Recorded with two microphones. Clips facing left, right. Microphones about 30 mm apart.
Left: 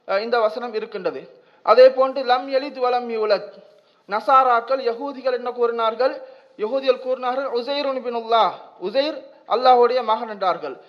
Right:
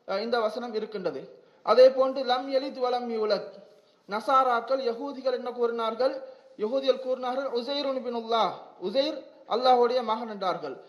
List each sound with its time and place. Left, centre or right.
0.0 s a man's voice: left